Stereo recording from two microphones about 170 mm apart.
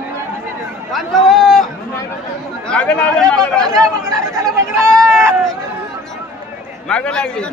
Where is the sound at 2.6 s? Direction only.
5° left (ahead or behind).